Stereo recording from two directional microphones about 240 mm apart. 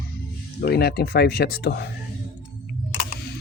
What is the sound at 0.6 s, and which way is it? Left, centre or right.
Speech, left.